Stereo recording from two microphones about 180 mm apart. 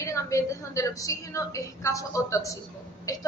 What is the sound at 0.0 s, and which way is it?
A woman's voice, 15° left (ahead or behind).